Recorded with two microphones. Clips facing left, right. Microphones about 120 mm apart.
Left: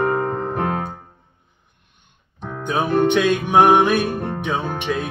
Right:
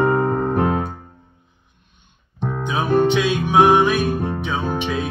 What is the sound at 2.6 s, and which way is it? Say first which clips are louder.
Music: even; 55° left (ahead or behind).